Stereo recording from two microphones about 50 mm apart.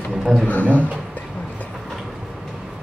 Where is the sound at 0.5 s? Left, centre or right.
Left.